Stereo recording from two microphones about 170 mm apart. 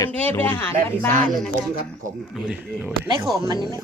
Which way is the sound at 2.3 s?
5° right (ahead or behind).